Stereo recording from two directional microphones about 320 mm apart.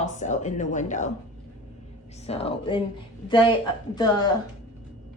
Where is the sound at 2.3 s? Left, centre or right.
Centre.